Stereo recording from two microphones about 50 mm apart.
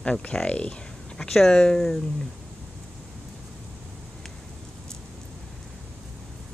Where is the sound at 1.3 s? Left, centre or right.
Centre.